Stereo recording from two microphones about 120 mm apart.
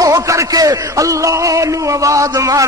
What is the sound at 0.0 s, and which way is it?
A man's voice, 25° right (ahead or behind).